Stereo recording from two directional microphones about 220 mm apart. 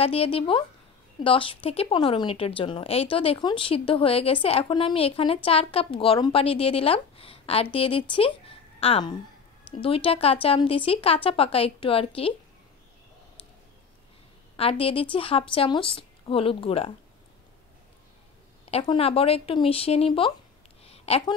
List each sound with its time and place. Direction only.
0.0 s a woman's voice: 25° left (ahead or behind)
14.6 s a woman's voice: 25° left (ahead or behind)
18.7 s a woman's voice: 25° left (ahead or behind)
20.8 s a sound: 25° left (ahead or behind)